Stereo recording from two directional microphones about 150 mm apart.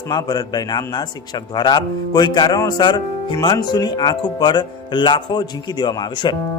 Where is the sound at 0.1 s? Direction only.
25° left (ahead or behind).